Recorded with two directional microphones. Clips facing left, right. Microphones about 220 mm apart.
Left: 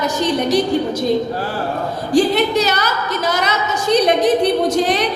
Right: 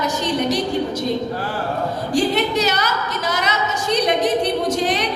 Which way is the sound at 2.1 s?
35° left (ahead or behind).